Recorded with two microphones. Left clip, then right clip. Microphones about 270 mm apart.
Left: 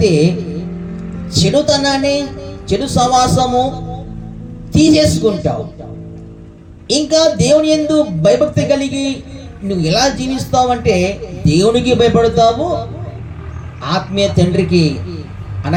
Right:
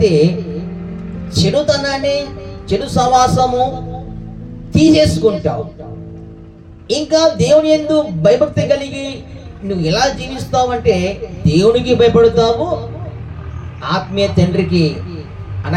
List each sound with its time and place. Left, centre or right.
1.3 s a man's voice: left
4.7 s a man's voice: left
6.8 s a man's voice: left
13.8 s a man's voice: left